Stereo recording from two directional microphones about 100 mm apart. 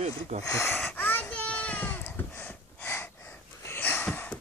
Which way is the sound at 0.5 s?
25° left (ahead or behind).